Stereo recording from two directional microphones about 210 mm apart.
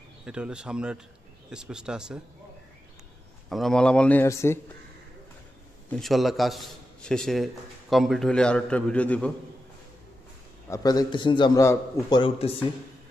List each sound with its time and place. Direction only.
0.2 s a man's voice: 5° right (ahead or behind)
3.4 s a man's voice: centre (ahead or behind)
5.9 s a man's voice: centre (ahead or behind)
10.7 s a man's voice: 15° left (ahead or behind)